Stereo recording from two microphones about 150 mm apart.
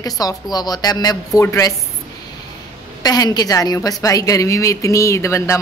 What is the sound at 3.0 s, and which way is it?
A woman's voice, 25° left (ahead or behind).